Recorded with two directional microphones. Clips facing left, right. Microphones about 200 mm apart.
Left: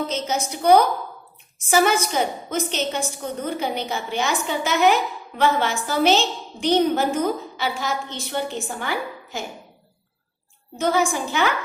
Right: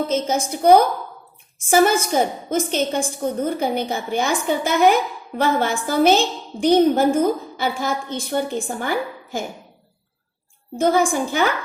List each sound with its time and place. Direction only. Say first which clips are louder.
0.1 s a woman's voice: right 5 dB; 50° right (ahead or behind)
1.9 s a woman's voice: right 3 dB; 50° right (ahead or behind)
10.8 s a woman's voice: right 4 dB; 50° right (ahead or behind)